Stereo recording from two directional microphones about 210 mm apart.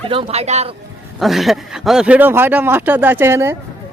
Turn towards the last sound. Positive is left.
turn(degrees=-10)  # may be behind; listen again after turning